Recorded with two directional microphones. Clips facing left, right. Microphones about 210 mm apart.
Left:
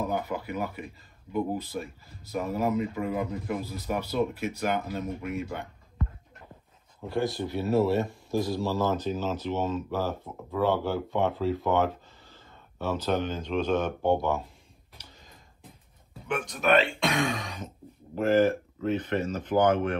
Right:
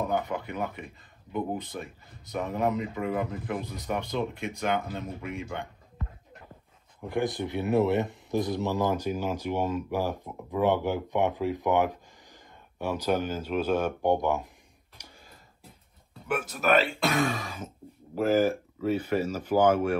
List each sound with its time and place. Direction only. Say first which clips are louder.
0.1 s speech: right 1 dB; 5° left (ahead or behind)
7.1 s speech: even; 15° right (ahead or behind)
15.0 s a sound: right 2 dB; 15° right (ahead or behind)
16.3 s speech: left 1 dB; 5° right (ahead or behind)